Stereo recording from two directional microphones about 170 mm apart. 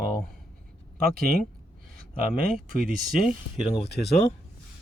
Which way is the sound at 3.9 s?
75° left (ahead or behind).